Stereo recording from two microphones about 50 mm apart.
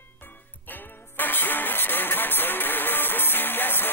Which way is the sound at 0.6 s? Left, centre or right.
Left.